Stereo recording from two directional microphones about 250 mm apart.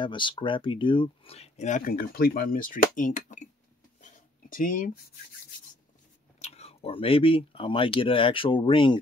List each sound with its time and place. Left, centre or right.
0.0 s speech: centre
4.0 s a sound: left
6.4 s speech: left